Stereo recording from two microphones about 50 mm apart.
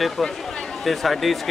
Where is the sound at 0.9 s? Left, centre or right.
Centre.